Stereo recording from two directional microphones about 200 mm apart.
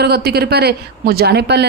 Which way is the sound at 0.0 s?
55° right (ahead or behind).